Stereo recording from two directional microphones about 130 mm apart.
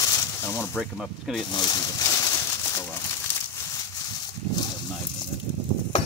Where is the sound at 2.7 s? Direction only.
20° left (ahead or behind).